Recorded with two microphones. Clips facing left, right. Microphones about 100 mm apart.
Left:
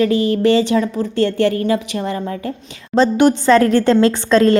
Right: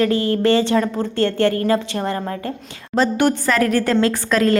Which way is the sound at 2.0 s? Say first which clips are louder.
Left 1 dB; 55° right (ahead or behind).